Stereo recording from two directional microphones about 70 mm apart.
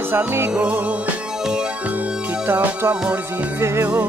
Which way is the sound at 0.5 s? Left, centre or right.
Centre.